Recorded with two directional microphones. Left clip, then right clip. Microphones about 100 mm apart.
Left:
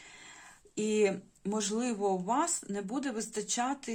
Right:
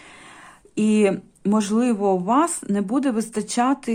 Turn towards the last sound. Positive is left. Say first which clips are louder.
# right 12 dB
turn(degrees=-50)  # may be behind; listen again after turning